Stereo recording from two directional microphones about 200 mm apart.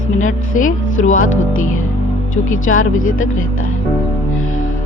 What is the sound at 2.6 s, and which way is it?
Speech, 85° left.